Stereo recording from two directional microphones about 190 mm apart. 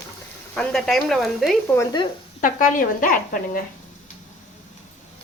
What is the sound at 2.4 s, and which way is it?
Speech, 45° left (ahead or behind).